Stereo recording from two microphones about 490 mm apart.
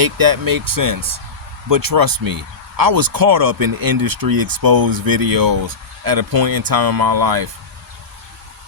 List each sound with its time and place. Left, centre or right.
0.0 s speech: right